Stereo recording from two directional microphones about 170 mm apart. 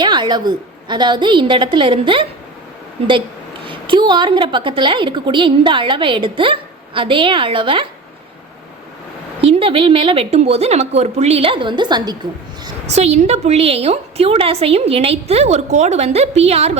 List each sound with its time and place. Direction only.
0.0 s a woman's voice: 25° right (ahead or behind)
3.7 s a woman's voice: 30° right (ahead or behind)
9.4 s a woman's voice: 30° right (ahead or behind)
12.9 s a woman's voice: 40° right (ahead or behind)